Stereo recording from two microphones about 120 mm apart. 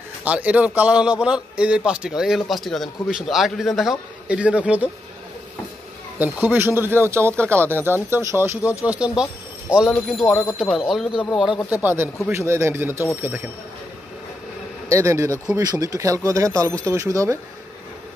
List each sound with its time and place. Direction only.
0.2 s a man's voice: 10° right (ahead or behind)
6.1 s speech: 15° right (ahead or behind)
10.2 s speech: 25° left (ahead or behind)
10.6 s a man's voice: centre (ahead or behind)
11.7 s speech: 15° right (ahead or behind)
14.9 s speech: 25° right (ahead or behind)